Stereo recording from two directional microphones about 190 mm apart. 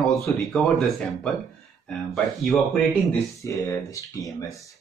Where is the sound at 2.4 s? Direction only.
5° left (ahead or behind).